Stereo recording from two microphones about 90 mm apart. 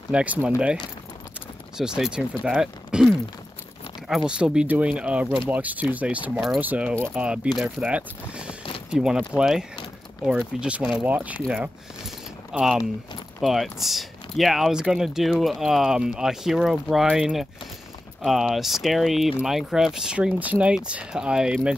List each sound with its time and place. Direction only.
0.1 s speech: 15° right (ahead or behind)
1.8 s speech: 5° right (ahead or behind)
4.3 s speech: 10° right (ahead or behind)
12.5 s speech: 5° right (ahead or behind)